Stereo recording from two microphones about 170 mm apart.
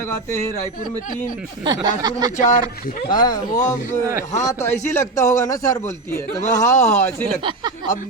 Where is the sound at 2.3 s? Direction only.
45° left (ahead or behind).